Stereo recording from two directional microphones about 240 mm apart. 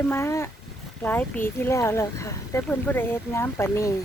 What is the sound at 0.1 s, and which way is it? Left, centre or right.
Speech, centre.